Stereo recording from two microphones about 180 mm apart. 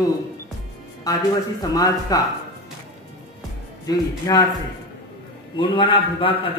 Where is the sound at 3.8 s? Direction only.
20° left (ahead or behind).